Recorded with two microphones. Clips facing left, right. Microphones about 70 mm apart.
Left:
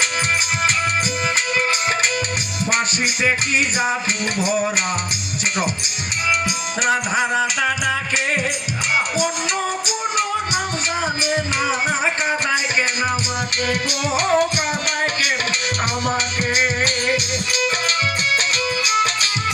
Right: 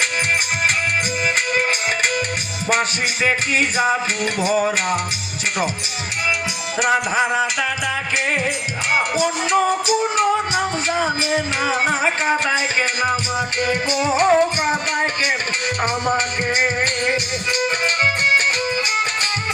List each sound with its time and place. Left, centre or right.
4.4 s music: right
13.7 s music: right